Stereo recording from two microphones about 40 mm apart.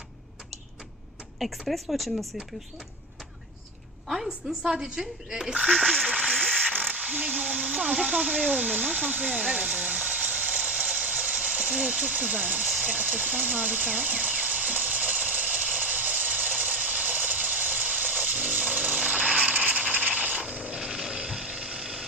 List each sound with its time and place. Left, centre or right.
1.4 s speech: centre
4.1 s a woman's voice: centre
4.6 s speech: centre
5.5 s speech: right
5.8 s speech: centre
6.5 s mechanisms: right
7.6 s blender: right
8.0 s a sound: right
12.8 s sewing machine: right
20.5 s vehicle: right
20.7 s a sound: centre